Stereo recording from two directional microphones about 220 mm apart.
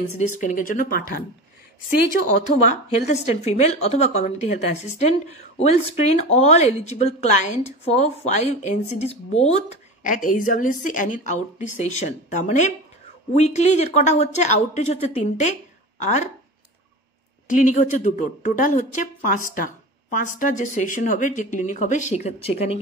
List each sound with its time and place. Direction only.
0.4 s a woman's voice: 35° left (ahead or behind)
2.6 s a woman's voice: 30° left (ahead or behind)
17.5 s a woman's voice: 35° left (ahead or behind)